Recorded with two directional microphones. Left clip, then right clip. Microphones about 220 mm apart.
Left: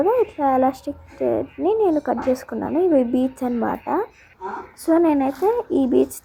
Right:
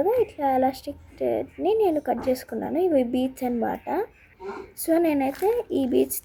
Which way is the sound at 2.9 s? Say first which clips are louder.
Left 4 dB; 10° left (ahead or behind).